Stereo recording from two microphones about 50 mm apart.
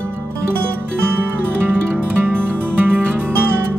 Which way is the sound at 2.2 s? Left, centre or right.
Right.